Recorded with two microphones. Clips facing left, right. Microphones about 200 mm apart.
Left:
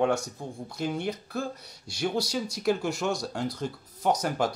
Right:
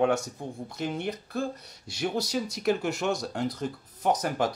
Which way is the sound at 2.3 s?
5° right (ahead or behind).